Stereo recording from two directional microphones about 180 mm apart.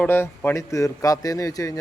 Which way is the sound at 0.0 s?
15° left (ahead or behind).